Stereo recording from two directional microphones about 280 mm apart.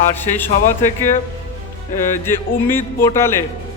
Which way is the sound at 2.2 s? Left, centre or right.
Centre.